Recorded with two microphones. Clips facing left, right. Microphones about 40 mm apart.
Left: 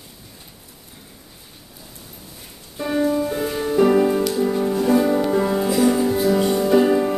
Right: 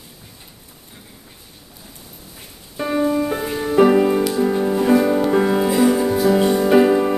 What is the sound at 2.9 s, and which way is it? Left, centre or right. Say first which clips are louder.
Music: right 1 dB; centre.